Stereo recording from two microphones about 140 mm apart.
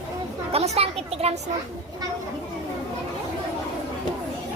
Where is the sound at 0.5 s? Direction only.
50° right (ahead or behind).